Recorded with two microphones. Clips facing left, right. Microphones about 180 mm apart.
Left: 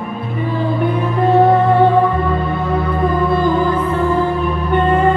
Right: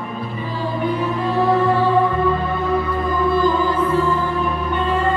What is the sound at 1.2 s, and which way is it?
Music, 60° left (ahead or behind).